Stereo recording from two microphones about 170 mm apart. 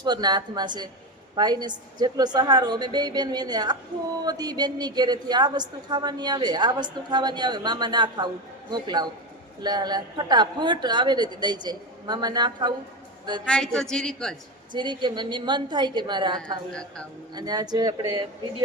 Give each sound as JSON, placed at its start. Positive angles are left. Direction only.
{"t": 0.0, "sound": "a woman's voice", "side_deg": -25}
{"t": 13.4, "sound": "a woman's voice", "side_deg": 5}
{"t": 14.7, "sound": "a woman's voice", "side_deg": -25}